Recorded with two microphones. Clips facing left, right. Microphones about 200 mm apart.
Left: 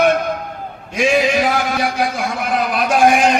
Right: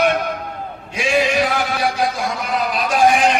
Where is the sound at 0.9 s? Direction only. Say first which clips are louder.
Left 2 dB; 45° left (ahead or behind).